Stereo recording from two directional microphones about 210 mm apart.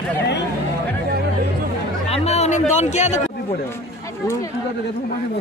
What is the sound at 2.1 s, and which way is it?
Music, 30° left (ahead or behind).